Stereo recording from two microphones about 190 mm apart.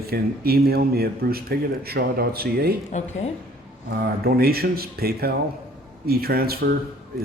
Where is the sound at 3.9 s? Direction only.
55° right (ahead or behind).